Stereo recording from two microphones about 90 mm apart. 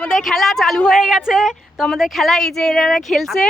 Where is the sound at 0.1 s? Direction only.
Centre (ahead or behind).